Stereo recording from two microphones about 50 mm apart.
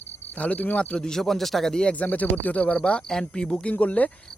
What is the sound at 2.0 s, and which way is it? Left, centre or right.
Speech, left.